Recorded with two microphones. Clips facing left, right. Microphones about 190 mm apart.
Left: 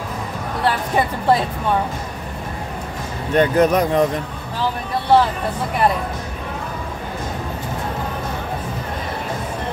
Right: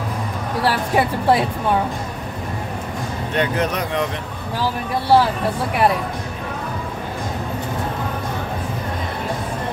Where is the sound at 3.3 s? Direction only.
45° left (ahead or behind).